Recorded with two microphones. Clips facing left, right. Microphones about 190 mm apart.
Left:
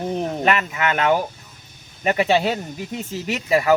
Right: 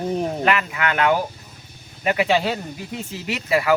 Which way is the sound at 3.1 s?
45° left (ahead or behind).